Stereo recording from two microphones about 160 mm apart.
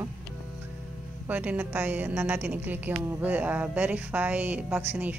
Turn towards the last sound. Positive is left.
turn(degrees=-10)  # may be behind; listen again after turning